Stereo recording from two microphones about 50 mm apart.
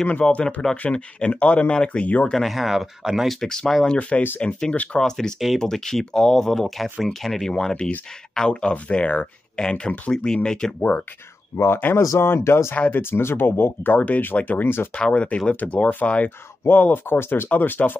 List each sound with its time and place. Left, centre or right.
0.0 s speech: left
2.3 s speech: centre
3.3 s speech: centre
10.8 s speech: left
11.5 s speech: left
12.9 s speech: left
15.0 s speech: left
17.5 s speech: left